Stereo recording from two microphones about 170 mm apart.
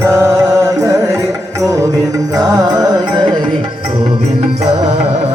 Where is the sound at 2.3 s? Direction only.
25° right (ahead or behind).